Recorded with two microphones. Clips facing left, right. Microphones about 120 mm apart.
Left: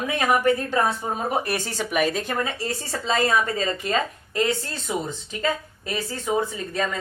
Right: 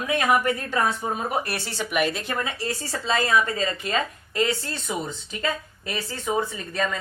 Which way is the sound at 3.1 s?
30° left (ahead or behind).